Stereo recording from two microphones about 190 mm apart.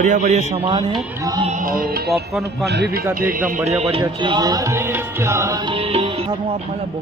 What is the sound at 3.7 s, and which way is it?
Music, 35° right (ahead or behind).